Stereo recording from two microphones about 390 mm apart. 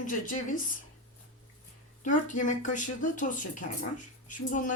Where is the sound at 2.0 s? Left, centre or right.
Centre.